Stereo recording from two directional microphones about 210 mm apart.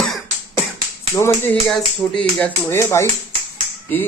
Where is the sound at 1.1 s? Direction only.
10° left (ahead or behind).